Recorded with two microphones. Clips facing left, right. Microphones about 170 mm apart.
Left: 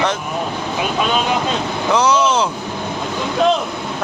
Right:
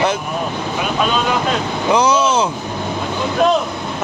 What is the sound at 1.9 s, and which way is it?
Speech, 10° right (ahead or behind).